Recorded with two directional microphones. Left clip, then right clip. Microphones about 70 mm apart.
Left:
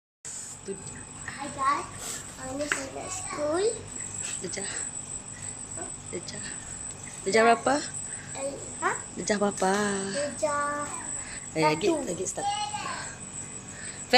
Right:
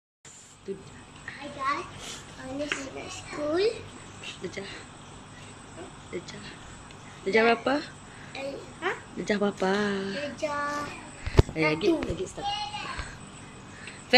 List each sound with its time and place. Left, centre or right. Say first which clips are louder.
0.7 s speech: right 1 dB; left
1.2 s a sound: left 3 dB; left
2.6 s speech: left 2 dB; left
3.5 s a child's voice: right 3 dB; centre
4.4 s speech: left 1 dB; left
6.1 s a child's voice: even; left